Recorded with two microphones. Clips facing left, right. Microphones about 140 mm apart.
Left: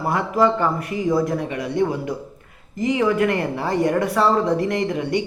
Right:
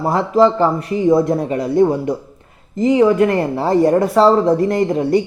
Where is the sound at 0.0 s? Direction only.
25° right (ahead or behind).